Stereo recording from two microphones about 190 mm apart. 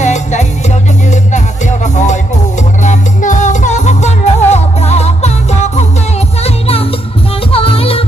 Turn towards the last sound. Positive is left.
turn(degrees=30)  # may be behind; listen again after turning